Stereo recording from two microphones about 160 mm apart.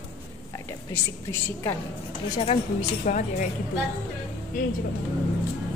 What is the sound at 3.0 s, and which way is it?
Speech, 55° left (ahead or behind).